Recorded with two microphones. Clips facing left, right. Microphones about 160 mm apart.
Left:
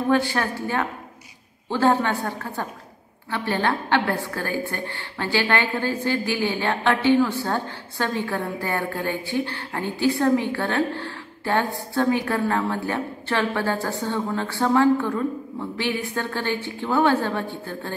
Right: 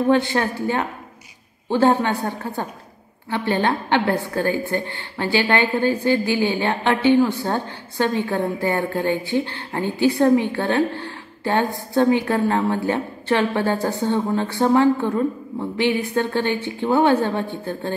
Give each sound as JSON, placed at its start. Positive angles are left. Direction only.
{"t": 0.1, "sound": "a woman's voice", "side_deg": -20}